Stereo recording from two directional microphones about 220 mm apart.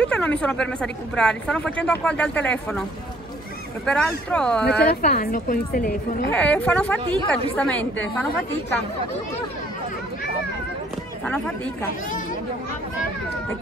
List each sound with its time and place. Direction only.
0.0 s a woman's voice: 5° left (ahead or behind)
3.8 s a woman's voice: 5° left (ahead or behind)
5.0 s a woman's voice: 40° left (ahead or behind)
6.3 s a woman's voice: 5° left (ahead or behind)
11.2 s a woman's voice: 5° left (ahead or behind)